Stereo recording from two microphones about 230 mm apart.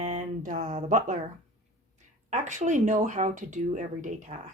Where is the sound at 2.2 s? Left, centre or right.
Right.